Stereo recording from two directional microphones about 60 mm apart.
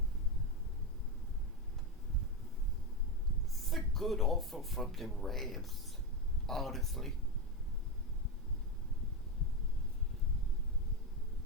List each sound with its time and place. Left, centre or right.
3.7 s speech: centre